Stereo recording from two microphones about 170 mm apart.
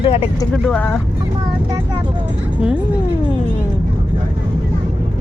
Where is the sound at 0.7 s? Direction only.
10° left (ahead or behind).